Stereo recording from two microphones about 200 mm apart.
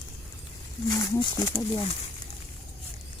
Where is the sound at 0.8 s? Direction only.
20° left (ahead or behind).